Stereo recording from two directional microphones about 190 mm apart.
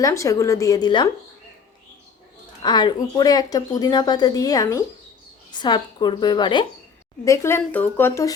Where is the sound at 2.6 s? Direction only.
25° left (ahead or behind).